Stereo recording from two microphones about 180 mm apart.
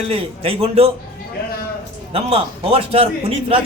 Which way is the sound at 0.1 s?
35° right (ahead or behind).